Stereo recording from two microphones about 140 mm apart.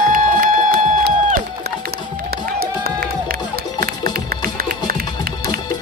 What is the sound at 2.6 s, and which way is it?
Crowd, 90° right.